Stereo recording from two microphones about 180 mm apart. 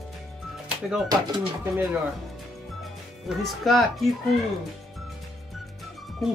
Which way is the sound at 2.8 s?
Centre (ahead or behind).